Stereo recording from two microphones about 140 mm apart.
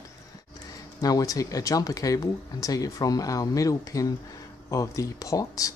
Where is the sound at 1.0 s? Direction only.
25° left (ahead or behind).